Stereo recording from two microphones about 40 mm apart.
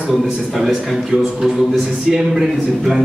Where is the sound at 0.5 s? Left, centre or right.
Centre.